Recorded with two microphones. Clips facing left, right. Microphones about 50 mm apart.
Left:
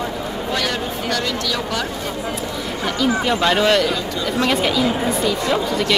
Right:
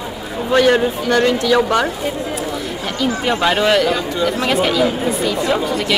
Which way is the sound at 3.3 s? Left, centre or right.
Centre.